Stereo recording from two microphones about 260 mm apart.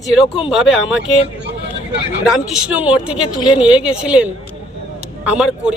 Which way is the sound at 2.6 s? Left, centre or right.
Centre.